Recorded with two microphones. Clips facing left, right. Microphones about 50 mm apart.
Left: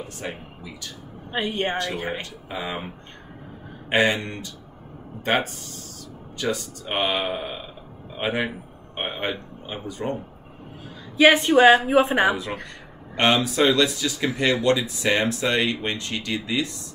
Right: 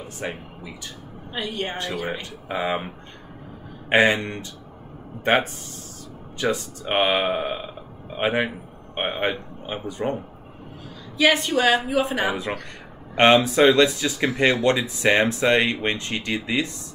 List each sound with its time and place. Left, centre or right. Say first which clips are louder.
0.2 s speech: right 3 dB; right
1.3 s a woman's voice: left 4 dB; left
2.2 s speech: right 5 dB; right
3.9 s speech: right 3 dB; right
6.3 s speech: right 2 dB; right
11.1 s a woman's voice: left 4 dB; left
12.6 s speech: right 1 dB; right